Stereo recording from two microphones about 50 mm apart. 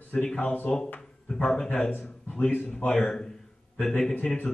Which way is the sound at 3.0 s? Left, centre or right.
Centre.